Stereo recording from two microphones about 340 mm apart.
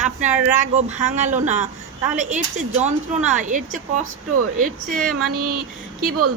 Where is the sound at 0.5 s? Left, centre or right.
Right.